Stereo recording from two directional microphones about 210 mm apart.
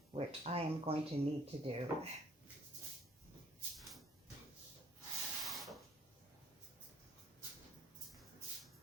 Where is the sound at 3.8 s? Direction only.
Centre (ahead or behind).